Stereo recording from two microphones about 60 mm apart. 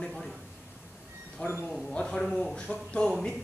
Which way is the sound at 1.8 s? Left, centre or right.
Centre.